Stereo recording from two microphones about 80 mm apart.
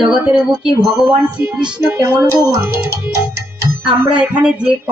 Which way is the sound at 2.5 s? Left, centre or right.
Right.